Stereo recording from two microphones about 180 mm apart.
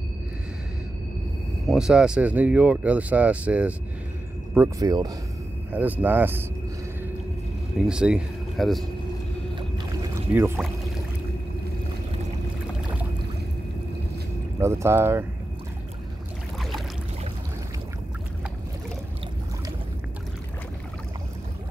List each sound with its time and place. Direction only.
1.7 s speech: 5° right (ahead or behind)
4.6 s speech: 20° right (ahead or behind)
7.8 s speech: 5° right (ahead or behind)
10.3 s speech: 10° right (ahead or behind)
14.6 s speech: 15° right (ahead or behind)